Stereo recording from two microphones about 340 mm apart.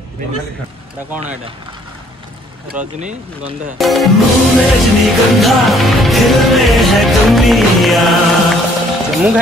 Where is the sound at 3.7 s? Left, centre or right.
Centre.